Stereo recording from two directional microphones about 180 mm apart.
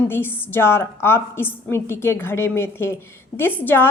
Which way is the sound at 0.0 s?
10° left (ahead or behind).